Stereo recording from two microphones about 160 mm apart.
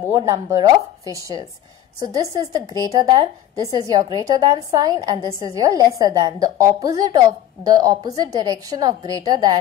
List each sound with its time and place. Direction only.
0.0 s a woman's voice: 20° right (ahead or behind)